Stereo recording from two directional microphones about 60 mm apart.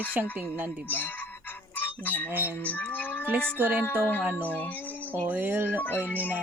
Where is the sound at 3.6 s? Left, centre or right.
Right.